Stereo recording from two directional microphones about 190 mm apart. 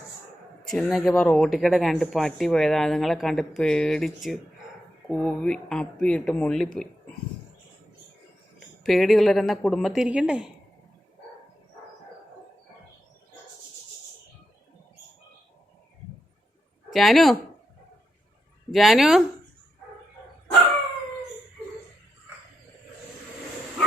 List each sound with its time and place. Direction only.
0.7 s speech: centre (ahead or behind)
8.8 s speech: centre (ahead or behind)
16.9 s speech: centre (ahead or behind)
18.7 s speech: centre (ahead or behind)